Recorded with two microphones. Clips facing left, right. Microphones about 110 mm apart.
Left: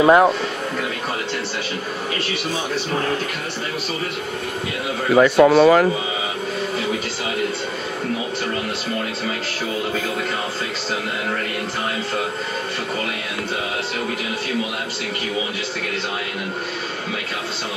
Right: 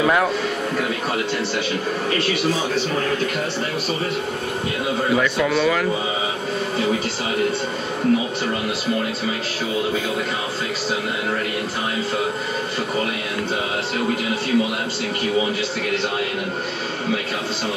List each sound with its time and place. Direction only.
0.0 s speech: 30° left (ahead or behind)
5.1 s speech: 40° left (ahead or behind)